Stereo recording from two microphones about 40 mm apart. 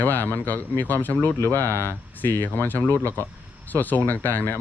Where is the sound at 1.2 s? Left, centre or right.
Left.